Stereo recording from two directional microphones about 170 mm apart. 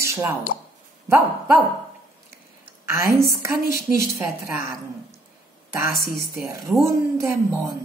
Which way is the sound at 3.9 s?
15° right (ahead or behind).